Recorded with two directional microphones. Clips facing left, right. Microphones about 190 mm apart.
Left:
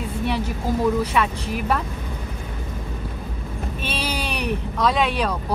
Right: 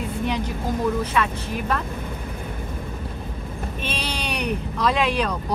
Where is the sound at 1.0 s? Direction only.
15° left (ahead or behind).